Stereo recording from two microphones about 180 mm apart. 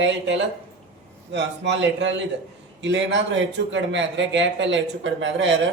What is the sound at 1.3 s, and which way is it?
Speech, 75° right (ahead or behind).